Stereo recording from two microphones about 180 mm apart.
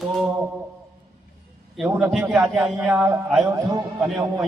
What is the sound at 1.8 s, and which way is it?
Speech, 5° right (ahead or behind).